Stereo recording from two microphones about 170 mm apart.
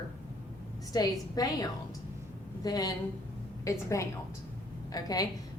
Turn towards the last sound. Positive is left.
turn(degrees=20)  # may be behind; listen again after turning